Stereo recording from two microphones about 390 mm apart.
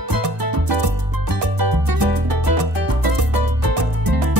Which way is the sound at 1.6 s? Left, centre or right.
Right.